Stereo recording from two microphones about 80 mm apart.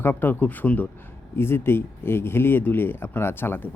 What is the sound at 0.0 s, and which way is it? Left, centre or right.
Speech, left.